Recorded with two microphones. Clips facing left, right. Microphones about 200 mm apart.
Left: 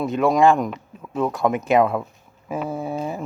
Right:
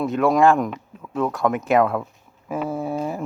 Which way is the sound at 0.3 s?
5° right (ahead or behind).